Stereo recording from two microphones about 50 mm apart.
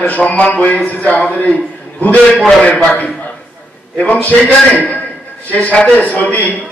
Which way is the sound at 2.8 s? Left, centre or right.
Left.